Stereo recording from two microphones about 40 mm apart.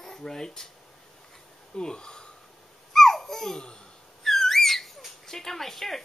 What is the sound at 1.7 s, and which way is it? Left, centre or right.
Speech, centre.